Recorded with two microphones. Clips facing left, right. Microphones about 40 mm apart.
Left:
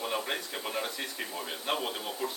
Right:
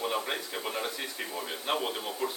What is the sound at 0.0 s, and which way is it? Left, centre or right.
A man's voice, centre.